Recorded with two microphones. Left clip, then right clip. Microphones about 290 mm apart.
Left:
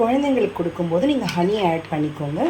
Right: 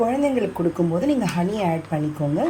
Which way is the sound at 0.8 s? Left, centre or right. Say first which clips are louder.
Left 3 dB; right.